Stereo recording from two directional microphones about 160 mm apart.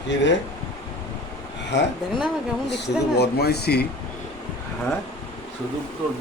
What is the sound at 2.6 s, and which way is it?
Speech, 90° left.